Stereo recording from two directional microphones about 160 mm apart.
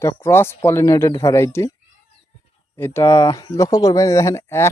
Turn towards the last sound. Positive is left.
turn(degrees=15)  # may be behind; listen again after turning